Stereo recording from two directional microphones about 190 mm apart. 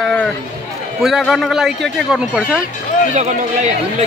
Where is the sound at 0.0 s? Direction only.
5° left (ahead or behind).